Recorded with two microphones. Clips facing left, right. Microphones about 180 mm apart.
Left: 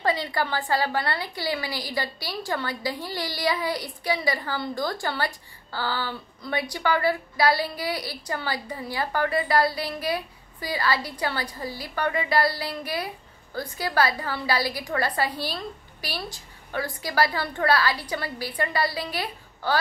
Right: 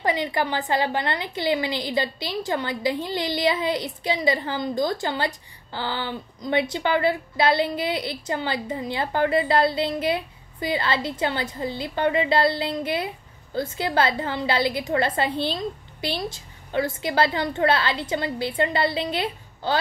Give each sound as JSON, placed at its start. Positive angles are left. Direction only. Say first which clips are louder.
{"t": 0.0, "sound": "a woman's voice", "louder": "right 2 dB", "side_deg": -20}